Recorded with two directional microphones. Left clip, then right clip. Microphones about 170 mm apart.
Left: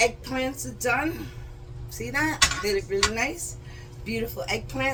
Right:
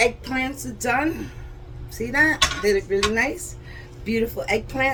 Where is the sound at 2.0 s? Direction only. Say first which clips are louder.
Right 5 dB; 15° right (ahead or behind).